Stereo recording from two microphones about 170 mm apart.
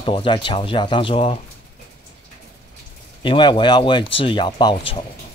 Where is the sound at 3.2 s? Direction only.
30° left (ahead or behind).